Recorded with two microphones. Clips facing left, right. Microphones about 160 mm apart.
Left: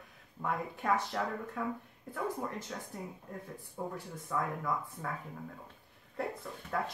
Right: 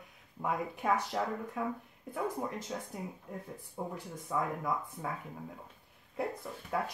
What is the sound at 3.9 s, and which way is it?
Speech, 20° right (ahead or behind).